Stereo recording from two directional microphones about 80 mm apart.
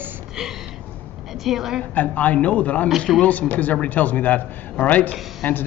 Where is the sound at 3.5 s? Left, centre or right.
Centre.